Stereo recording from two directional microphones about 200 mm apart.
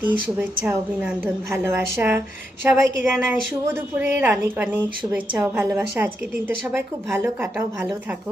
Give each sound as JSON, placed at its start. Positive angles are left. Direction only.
{"t": 0.0, "sound": "a woman's voice", "side_deg": -10}
{"t": 7.4, "sound": "a woman's voice", "side_deg": -10}